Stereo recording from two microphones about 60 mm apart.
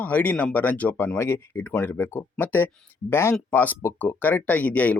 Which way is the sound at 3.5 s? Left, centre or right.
Left.